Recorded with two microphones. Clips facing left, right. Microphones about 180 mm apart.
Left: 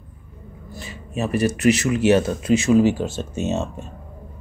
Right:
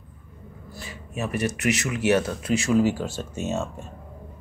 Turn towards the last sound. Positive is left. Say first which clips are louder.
# left 4 dB
turn(degrees=20)  # may be behind; listen again after turning